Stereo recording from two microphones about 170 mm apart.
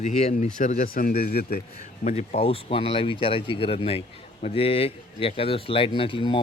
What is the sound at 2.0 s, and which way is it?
Speech, 40° left (ahead or behind).